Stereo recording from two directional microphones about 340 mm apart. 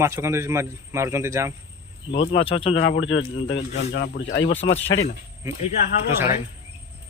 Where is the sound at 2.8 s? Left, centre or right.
Left.